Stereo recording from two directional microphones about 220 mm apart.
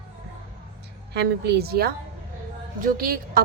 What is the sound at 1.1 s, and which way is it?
A woman's voice, 50° right (ahead or behind).